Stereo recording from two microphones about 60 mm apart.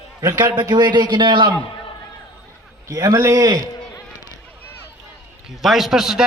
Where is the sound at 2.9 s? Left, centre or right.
Right.